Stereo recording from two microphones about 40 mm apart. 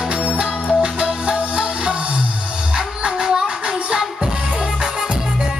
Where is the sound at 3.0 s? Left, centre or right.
Right.